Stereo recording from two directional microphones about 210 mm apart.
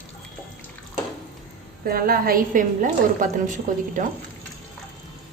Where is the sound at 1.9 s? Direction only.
45° right (ahead or behind).